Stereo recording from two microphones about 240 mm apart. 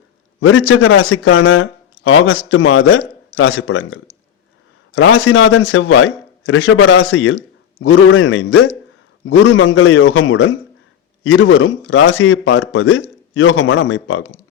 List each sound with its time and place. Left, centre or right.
0.3 s a man's voice: left